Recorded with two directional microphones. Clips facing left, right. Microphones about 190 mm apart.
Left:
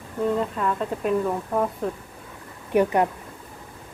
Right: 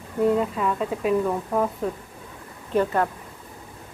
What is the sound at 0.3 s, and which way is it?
Speech, 5° right (ahead or behind).